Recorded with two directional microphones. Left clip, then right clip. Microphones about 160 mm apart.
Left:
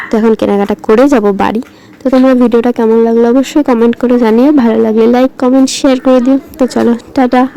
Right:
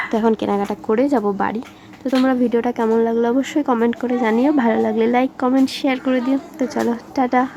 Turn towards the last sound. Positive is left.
turn(degrees=25)  # may be behind; listen again after turning